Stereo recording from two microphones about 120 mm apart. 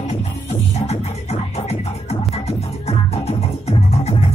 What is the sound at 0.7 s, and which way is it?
Music, 65° left (ahead or behind).